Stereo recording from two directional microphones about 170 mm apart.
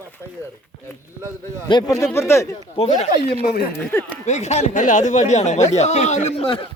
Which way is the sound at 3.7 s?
10° left (ahead or behind).